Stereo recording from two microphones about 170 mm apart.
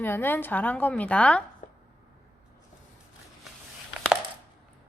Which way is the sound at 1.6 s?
55° left (ahead or behind).